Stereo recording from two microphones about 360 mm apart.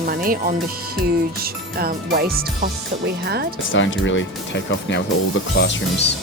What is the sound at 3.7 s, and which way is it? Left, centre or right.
Speech, left.